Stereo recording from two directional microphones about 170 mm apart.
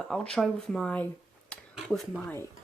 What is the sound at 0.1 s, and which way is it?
Speech, 5° left (ahead or behind).